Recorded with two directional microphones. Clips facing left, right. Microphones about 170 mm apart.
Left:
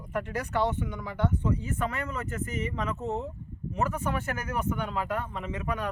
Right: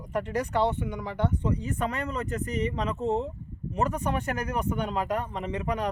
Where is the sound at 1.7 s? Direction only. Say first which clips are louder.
Right 2 dB; 35° right (ahead or behind).